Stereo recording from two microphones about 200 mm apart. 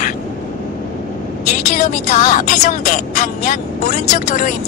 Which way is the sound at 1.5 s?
40° left (ahead or behind).